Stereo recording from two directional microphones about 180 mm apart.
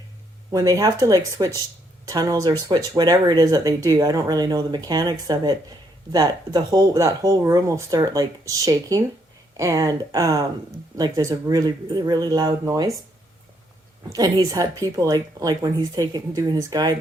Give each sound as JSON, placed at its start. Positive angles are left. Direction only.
{"t": 0.5, "sound": "speech", "side_deg": -20}
{"t": 14.1, "sound": "speech", "side_deg": -20}